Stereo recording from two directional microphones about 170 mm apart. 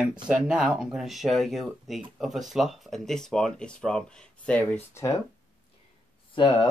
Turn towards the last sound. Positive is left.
turn(degrees=25)  # may be behind; listen again after turning